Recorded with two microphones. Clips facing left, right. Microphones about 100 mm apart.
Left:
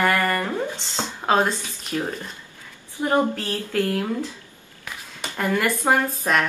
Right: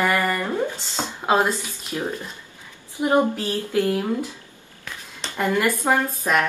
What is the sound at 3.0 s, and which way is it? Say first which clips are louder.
Speech: right 2 dB; 15° right (ahead or behind).